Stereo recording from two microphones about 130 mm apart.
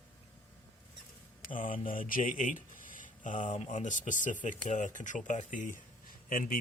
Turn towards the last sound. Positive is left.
turn(degrees=90)